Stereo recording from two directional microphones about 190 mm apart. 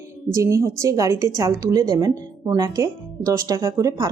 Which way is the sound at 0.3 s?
15° right (ahead or behind).